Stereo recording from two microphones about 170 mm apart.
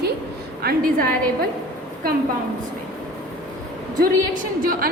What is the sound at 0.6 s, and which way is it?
Speech, 60° right (ahead or behind).